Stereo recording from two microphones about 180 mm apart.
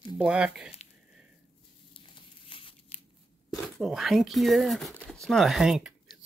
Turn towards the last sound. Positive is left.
turn(degrees=0)  # may be behind; listen again after turning